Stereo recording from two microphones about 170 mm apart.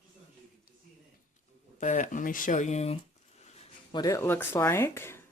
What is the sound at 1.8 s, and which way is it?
Speech, 45° left (ahead or behind).